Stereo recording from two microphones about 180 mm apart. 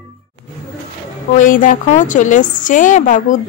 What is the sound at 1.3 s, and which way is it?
A woman's voice, 50° left (ahead or behind).